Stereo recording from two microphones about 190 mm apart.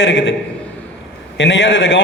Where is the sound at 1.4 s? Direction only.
75° left (ahead or behind).